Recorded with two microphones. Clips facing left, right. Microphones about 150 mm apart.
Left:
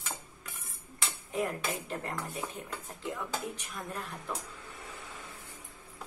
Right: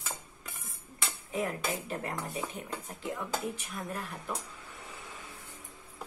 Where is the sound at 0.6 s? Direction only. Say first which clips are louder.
Even; centre (ahead or behind).